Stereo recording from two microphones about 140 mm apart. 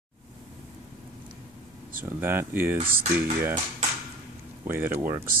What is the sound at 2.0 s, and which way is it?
Speech, 15° right (ahead or behind).